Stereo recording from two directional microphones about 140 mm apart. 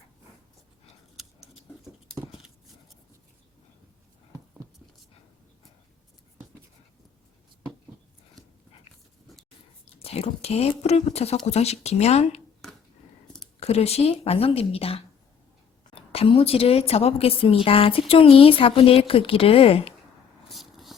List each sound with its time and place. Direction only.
4.3 s a sound: 15° right (ahead or behind)
10.0 s a woman's voice: 45° left (ahead or behind)
13.6 s a woman's voice: 50° left (ahead or behind)
20.5 s vehicle: centre (ahead or behind)